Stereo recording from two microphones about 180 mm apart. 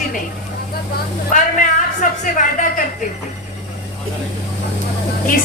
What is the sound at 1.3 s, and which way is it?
A woman's voice, 45° left (ahead or behind).